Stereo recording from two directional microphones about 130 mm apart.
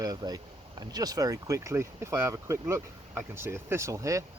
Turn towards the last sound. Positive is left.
turn(degrees=-25)  # may be behind; listen again after turning